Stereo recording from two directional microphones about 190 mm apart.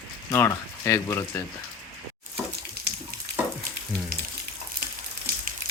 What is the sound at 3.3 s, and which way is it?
Frying, 60° right (ahead or behind).